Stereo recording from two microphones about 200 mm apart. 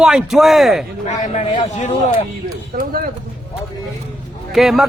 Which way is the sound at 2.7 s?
45° right (ahead or behind).